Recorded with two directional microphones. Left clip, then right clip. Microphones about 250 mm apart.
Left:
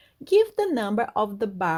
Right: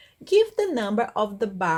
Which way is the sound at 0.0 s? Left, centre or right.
Left.